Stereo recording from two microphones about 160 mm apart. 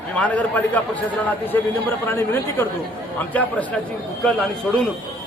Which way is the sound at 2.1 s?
15° left (ahead or behind).